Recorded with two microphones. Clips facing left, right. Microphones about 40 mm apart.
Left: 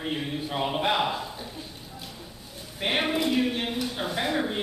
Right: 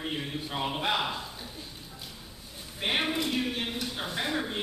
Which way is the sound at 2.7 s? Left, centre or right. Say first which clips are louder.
Left 3 dB; centre.